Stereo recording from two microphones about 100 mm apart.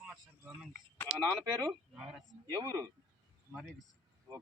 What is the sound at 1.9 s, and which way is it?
Speech, 10° right (ahead or behind).